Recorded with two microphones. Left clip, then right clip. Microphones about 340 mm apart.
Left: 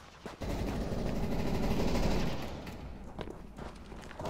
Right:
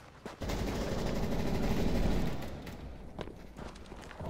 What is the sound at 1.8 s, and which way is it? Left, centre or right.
Vehicle, centre.